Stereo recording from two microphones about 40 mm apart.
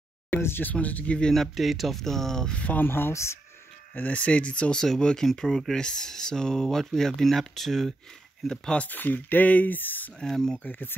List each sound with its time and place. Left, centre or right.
0.4 s speech: left
0.7 s speech: left
1.3 s speech: centre
2.5 s speech: left
2.8 s speech: left
4.1 s speech: left
4.8 s speech: centre
8.7 s speech: left
10.2 s speech: centre